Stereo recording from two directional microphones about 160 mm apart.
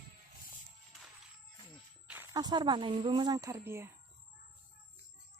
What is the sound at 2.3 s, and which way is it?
Speech, 25° right (ahead or behind).